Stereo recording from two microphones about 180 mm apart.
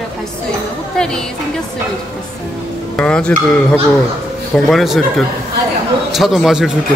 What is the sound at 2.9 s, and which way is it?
Speech, 5° left (ahead or behind).